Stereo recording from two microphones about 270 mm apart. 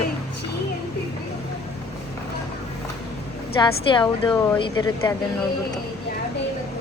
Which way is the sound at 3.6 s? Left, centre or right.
Centre.